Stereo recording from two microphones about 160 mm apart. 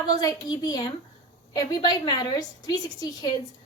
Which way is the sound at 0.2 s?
25° left (ahead or behind).